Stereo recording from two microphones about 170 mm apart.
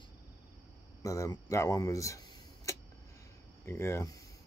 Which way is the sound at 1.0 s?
20° left (ahead or behind).